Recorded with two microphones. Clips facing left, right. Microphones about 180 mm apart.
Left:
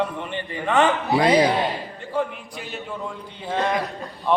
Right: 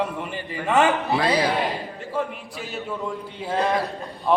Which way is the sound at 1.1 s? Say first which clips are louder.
Left 4 dB; 20° left (ahead or behind).